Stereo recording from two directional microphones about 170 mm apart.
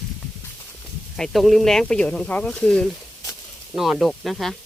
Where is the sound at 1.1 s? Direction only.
Centre (ahead or behind).